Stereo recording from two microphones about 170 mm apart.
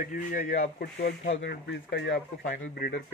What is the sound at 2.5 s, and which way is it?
Speech, 60° left (ahead or behind).